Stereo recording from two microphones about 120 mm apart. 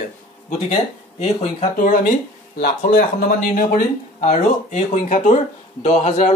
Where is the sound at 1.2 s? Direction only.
65° left (ahead or behind); by 2.1 s 90° left.